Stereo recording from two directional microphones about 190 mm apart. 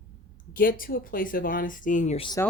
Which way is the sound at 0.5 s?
50° left (ahead or behind).